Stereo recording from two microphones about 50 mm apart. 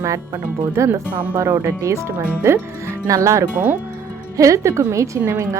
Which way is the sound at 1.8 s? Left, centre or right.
Right.